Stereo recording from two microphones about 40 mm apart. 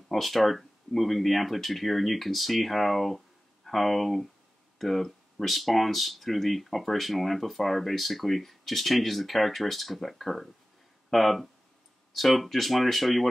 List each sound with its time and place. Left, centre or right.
0.1 s speech: centre